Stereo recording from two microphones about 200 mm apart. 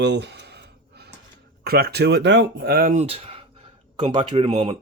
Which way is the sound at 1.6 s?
50° right (ahead or behind).